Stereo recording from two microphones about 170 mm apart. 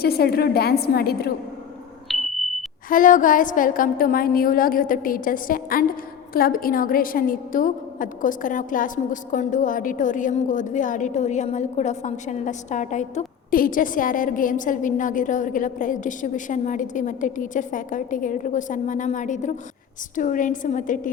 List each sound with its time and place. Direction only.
0.0 s a woman's voice: 65° left (ahead or behind)
2.0 s sonar: centre (ahead or behind)
2.9 s a woman's voice: 50° left (ahead or behind)